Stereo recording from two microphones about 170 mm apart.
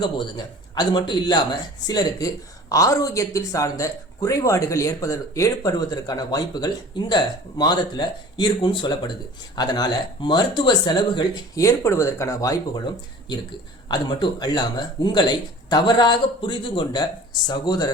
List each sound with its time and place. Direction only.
0.0 s speech: 25° left (ahead or behind)